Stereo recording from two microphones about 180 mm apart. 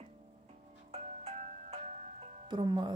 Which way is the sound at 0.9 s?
35° right (ahead or behind).